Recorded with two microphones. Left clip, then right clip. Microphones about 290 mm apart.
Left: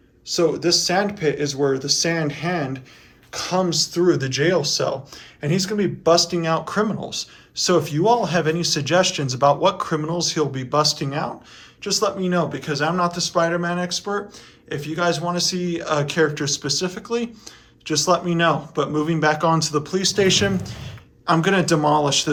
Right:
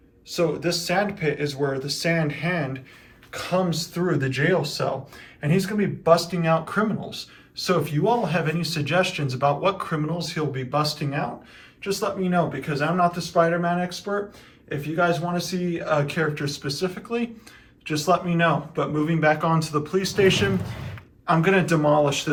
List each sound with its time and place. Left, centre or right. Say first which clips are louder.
0.3 s speech: left 5 dB; centre
4.0 s a man's voice: left 3 dB; centre